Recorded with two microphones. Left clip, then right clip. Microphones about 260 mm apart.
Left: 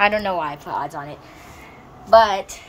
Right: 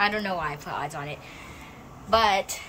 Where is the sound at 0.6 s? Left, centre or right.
Right.